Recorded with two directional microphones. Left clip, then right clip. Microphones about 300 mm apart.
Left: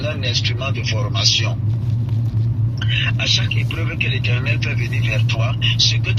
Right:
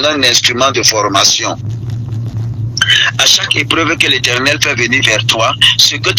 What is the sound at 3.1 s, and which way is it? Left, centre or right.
A man's voice, right.